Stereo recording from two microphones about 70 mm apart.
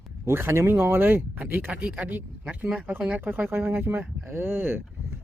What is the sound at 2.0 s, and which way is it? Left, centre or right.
Speech, right.